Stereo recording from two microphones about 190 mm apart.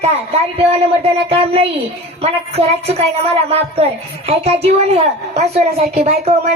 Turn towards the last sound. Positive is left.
turn(degrees=-30)  # may be behind; listen again after turning